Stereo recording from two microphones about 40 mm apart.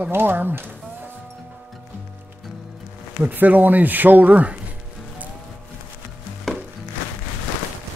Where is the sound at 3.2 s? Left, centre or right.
Right.